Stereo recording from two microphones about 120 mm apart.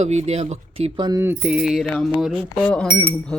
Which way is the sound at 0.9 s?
35° right (ahead or behind).